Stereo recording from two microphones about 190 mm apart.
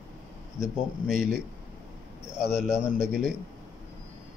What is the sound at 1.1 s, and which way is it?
Speech, 45° right (ahead or behind).